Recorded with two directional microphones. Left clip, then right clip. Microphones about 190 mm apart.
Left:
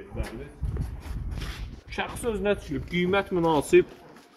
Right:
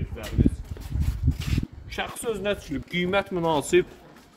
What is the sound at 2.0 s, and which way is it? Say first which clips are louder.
Speech: even; 30° right (ahead or behind).